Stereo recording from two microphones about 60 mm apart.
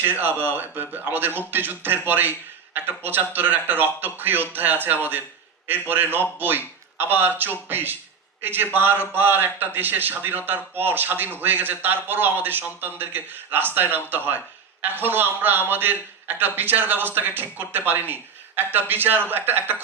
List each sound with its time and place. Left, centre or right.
0.0 s a man's voice: right